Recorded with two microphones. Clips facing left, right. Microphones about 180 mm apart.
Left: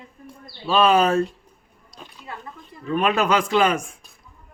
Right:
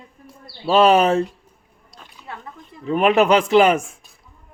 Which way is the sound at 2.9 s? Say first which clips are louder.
Right 5 dB; 25° right (ahead or behind).